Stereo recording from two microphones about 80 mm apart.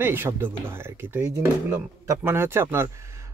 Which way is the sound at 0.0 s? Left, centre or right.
Right.